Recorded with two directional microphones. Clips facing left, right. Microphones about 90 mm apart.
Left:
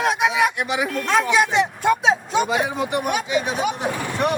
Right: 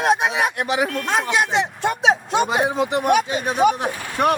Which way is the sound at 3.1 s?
40° right (ahead or behind).